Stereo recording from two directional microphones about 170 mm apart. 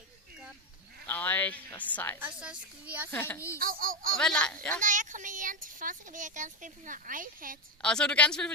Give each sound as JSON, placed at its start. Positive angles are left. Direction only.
{"t": 1.0, "sound": "speech", "side_deg": 10}
{"t": 2.1, "sound": "a woman's voice", "side_deg": -10}
{"t": 3.1, "sound": "a child's voice", "side_deg": 10}
{"t": 3.5, "sound": "speech", "side_deg": -55}
{"t": 4.2, "sound": "a woman's voice", "side_deg": 5}
{"t": 4.8, "sound": "speech", "side_deg": -50}
{"t": 7.8, "sound": "a woman's voice", "side_deg": 5}